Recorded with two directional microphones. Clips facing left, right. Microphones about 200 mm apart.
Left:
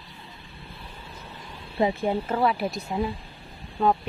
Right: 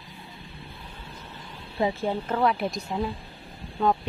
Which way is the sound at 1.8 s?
15° left (ahead or behind).